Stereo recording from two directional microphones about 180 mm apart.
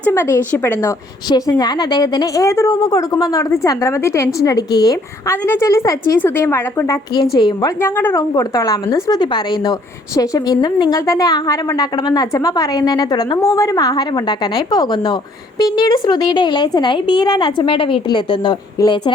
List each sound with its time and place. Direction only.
0.0 s a woman's voice: 15° left (ahead or behind)
7.8 s a woman's voice: 10° left (ahead or behind)